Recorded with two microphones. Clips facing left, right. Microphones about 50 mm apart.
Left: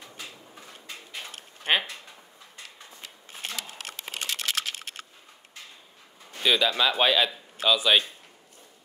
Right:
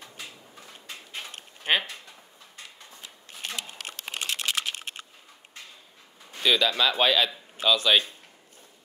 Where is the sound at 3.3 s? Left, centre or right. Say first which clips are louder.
Even; left.